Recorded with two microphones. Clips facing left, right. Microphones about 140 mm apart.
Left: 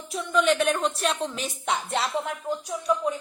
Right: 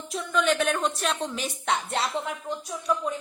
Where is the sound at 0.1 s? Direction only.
Centre (ahead or behind).